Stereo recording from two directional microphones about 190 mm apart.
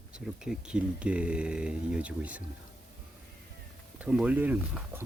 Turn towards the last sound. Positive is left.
turn(degrees=-10)  # may be behind; listen again after turning